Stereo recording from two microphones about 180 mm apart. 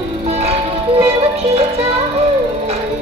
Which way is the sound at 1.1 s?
35° right (ahead or behind).